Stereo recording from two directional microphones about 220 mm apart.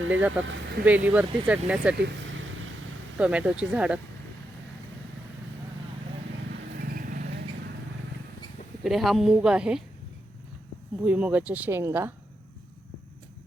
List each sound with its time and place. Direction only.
0.1 s speech: 5° right (ahead or behind)
3.2 s a woman's voice: 5° right (ahead or behind)
6.7 s vehicle: 40° right (ahead or behind)
8.8 s a woman's voice: centre (ahead or behind)
11.0 s speech: 5° right (ahead or behind)